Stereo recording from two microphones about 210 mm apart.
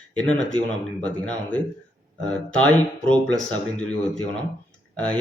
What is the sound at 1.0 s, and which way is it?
A man's voice, 5° left (ahead or behind).